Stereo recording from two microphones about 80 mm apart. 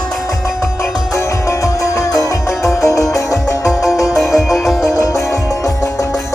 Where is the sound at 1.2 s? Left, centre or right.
Left.